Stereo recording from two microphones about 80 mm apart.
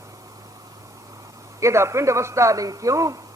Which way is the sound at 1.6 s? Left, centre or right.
Right.